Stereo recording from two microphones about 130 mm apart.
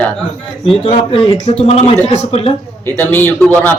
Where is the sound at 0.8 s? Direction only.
50° left (ahead or behind).